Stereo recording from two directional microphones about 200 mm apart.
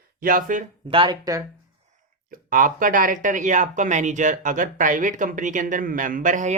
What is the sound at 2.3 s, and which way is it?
Speech, 45° right (ahead or behind).